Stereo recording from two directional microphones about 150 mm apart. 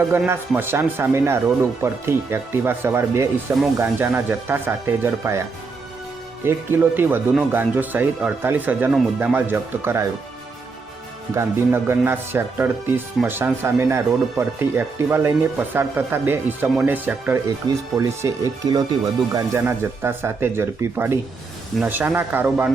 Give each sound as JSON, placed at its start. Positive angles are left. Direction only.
{"t": 0.3, "sound": "speech", "side_deg": -15}
{"t": 11.3, "sound": "speech", "side_deg": -15}
{"t": 19.6, "sound": "speech", "side_deg": -15}